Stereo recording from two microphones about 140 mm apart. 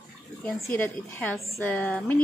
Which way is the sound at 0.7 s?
10° left (ahead or behind).